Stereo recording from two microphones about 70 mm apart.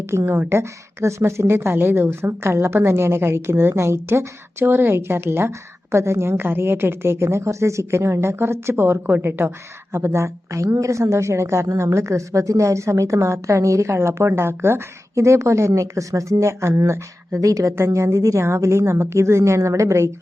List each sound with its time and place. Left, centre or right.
0.3 s a woman's voice: right
11.7 s speech: right
15.1 s speech: right